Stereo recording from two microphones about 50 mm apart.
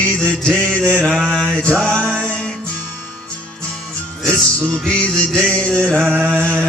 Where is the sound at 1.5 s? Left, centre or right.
Centre.